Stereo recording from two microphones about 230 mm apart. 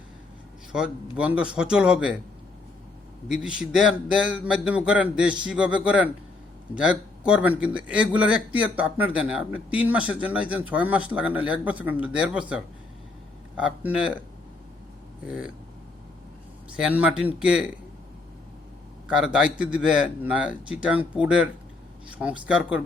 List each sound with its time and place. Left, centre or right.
0.7 s speech: centre
3.4 s speech: centre
15.3 s speech: centre
16.7 s speech: centre
19.0 s speech: centre